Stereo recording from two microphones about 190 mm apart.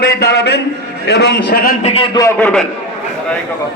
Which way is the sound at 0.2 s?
60° left (ahead or behind).